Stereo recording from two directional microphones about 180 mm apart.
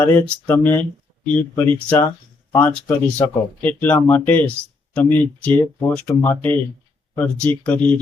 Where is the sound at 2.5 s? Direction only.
15° left (ahead or behind).